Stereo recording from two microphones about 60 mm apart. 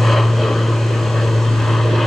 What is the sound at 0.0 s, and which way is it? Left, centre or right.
Vehicle, centre.